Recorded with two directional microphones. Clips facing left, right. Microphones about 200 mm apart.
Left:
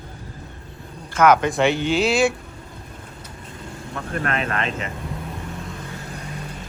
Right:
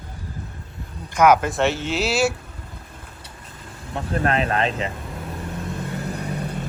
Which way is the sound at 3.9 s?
30° right (ahead or behind).